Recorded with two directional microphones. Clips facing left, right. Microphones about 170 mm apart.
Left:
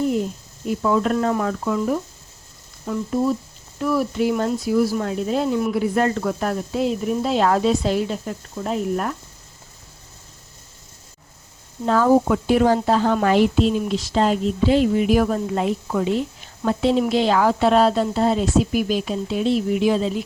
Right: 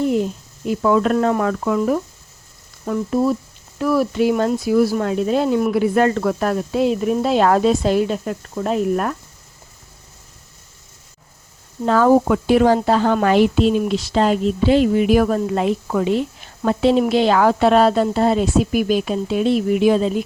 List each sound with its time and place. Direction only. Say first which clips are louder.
0.8 s speech: right 4 dB; 75° right (ahead or behind)
11.9 s speech: right 2 dB; 75° right (ahead or behind); by 20.2 s 50° right (ahead or behind)